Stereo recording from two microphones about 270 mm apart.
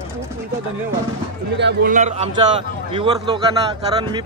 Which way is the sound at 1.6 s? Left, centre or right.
Right.